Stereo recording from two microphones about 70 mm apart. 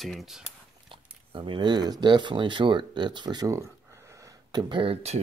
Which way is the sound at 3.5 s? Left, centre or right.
Right.